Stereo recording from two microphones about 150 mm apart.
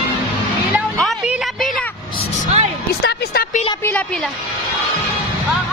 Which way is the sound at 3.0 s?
90° left.